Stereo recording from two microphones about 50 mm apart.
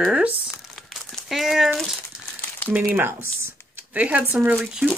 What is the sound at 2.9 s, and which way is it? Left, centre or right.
Speech, right.